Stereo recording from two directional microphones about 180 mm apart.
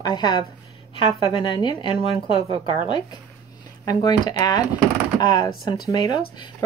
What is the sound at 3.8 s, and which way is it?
Speech, 20° left (ahead or behind).